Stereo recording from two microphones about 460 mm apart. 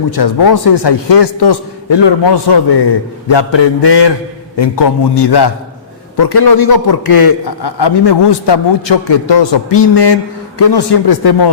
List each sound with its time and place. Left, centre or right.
0.1 s a man's voice: left